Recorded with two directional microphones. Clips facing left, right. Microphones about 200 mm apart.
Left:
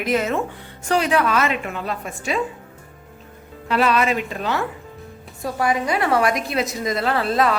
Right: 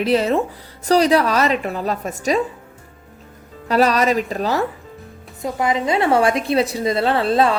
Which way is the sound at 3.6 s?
40° right (ahead or behind).